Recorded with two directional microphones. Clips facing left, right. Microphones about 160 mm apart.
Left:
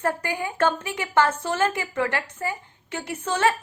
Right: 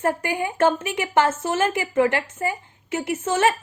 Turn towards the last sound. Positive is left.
turn(degrees=-20)  # may be behind; listen again after turning